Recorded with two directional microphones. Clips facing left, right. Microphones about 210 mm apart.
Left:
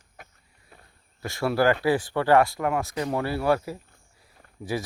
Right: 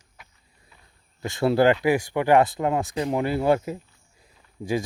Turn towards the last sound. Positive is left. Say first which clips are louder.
# right 4 dB
turn(degrees=-20)  # may be behind; listen again after turning